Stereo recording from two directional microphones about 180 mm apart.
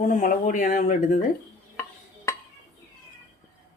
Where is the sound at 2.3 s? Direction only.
15° left (ahead or behind).